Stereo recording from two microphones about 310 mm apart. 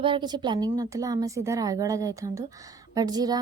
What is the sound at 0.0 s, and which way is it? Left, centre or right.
A woman's voice, centre.